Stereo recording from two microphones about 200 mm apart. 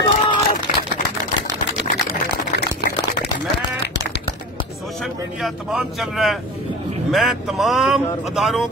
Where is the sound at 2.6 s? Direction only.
55° left (ahead or behind).